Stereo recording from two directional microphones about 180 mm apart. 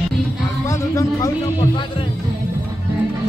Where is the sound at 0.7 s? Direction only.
15° left (ahead or behind).